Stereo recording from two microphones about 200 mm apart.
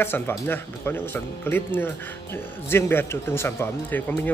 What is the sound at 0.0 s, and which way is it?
A man's voice, 10° left (ahead or behind).